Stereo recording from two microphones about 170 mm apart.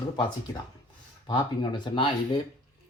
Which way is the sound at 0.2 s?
25° left (ahead or behind).